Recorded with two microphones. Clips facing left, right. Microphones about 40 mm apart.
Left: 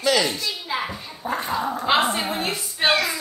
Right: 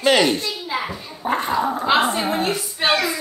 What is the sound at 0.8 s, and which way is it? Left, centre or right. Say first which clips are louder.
Dog: right 1 dB; centre.